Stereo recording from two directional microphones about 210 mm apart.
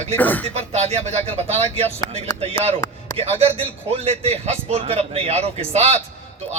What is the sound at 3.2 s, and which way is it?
A man's voice, 30° right (ahead or behind).